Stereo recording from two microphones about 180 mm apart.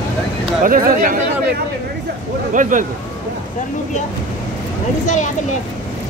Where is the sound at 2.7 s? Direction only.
45° right (ahead or behind).